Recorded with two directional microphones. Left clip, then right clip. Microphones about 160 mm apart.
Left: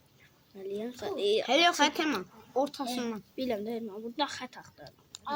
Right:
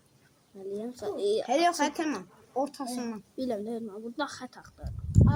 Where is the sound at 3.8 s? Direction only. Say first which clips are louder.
Left 1 dB; 5° right (ahead or behind).